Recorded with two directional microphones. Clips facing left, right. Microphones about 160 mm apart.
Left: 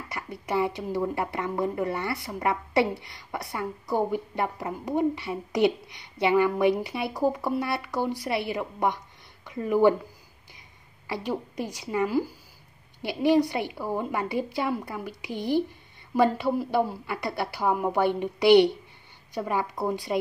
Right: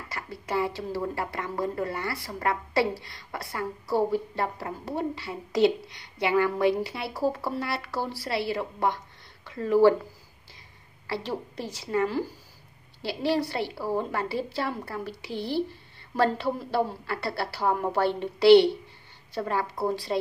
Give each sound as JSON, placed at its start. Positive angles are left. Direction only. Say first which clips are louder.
{"t": 0.1, "sound": "a woman's voice", "louder": "left 1 dB", "side_deg": 20}
{"t": 11.1, "sound": "speech", "louder": "left 1 dB", "side_deg": 15}